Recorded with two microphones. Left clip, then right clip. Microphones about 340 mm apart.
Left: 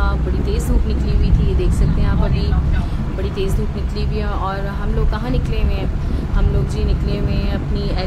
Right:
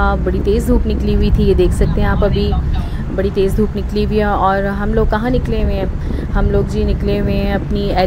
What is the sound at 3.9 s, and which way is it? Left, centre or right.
Speech, centre.